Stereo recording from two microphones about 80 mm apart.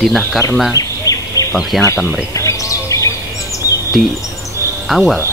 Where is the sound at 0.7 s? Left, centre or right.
Left.